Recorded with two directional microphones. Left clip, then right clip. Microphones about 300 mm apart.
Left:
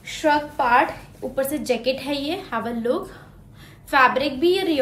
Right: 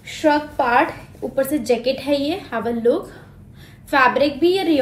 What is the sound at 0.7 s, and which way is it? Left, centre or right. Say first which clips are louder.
A woman's voice: even; centre.